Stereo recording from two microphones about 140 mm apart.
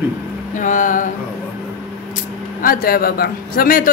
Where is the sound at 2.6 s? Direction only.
90° left.